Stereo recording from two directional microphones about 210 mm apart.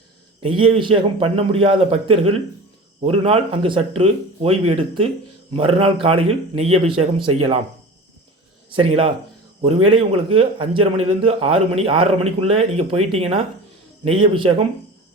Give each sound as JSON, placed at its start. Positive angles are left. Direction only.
{"t": 0.4, "sound": "a man's voice", "side_deg": -25}
{"t": 8.7, "sound": "a man's voice", "side_deg": -25}